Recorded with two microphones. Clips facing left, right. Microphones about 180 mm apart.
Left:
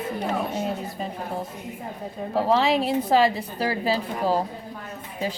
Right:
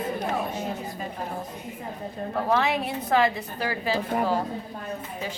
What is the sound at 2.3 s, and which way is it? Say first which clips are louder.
A woman's voice: left 4 dB; 30° left (ahead or behind).